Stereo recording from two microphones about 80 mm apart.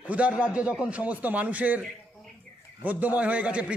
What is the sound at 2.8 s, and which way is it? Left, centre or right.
Speech, right.